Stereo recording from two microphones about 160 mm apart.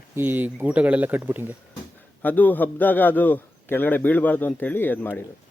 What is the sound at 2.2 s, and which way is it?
A man's voice, 10° left (ahead or behind).